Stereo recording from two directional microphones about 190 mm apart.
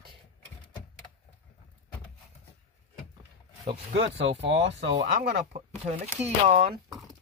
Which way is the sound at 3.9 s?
70° right (ahead or behind).